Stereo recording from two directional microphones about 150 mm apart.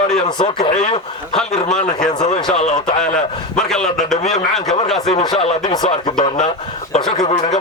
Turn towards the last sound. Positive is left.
turn(degrees=30)  # may be behind; listen again after turning